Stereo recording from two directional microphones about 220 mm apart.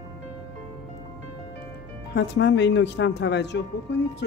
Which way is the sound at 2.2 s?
55° left (ahead or behind).